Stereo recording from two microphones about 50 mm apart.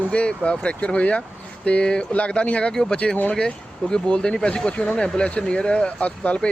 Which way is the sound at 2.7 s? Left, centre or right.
Centre.